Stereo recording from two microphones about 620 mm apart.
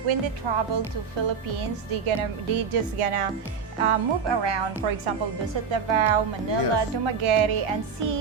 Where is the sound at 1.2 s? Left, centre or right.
Right.